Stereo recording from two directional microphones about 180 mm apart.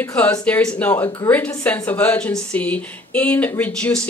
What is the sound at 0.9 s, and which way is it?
Speech, 20° left (ahead or behind).